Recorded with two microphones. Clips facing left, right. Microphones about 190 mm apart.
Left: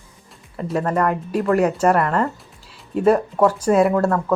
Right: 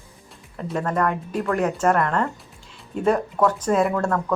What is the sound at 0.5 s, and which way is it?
Speech, 5° left (ahead or behind).